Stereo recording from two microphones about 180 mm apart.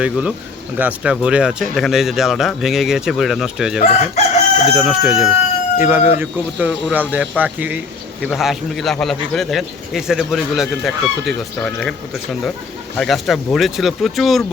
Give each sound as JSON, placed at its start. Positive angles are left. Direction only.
{"t": 0.0, "sound": "speech", "side_deg": -5}
{"t": 3.8, "sound": "chicken", "side_deg": 35}
{"t": 4.7, "sound": "speech", "side_deg": 0}